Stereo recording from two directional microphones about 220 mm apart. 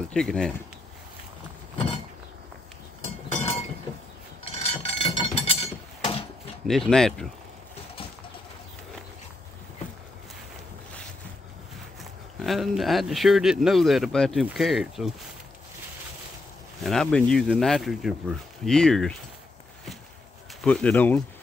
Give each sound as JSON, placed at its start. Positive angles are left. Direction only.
{"t": 0.1, "sound": "speech", "side_deg": 5}
{"t": 3.3, "sound": "chink", "side_deg": 30}
{"t": 4.5, "sound": "a sound", "side_deg": 25}
{"t": 6.7, "sound": "speech", "side_deg": 0}
{"t": 12.0, "sound": "speech", "side_deg": 0}
{"t": 16.8, "sound": "speech", "side_deg": 5}
{"t": 20.6, "sound": "speech", "side_deg": 5}